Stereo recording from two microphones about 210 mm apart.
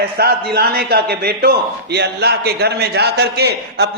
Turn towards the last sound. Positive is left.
turn(degrees=-50)  # may be behind; listen again after turning